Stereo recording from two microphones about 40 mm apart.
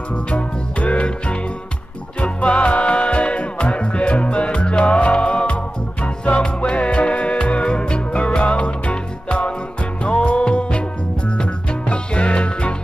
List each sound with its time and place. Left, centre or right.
0.1 s music: left